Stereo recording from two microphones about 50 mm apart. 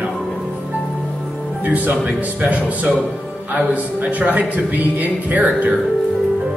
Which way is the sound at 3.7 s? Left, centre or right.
Right.